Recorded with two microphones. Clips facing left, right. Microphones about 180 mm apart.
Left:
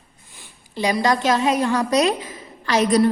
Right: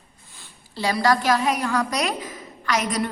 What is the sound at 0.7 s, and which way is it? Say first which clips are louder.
A woman's voice: left 1 dB; 20° left (ahead or behind).